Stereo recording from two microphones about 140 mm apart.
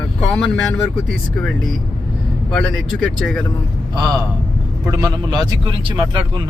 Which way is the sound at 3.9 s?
30° right (ahead or behind).